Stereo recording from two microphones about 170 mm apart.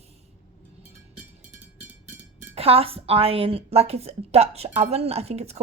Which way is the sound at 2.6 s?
35° right (ahead or behind).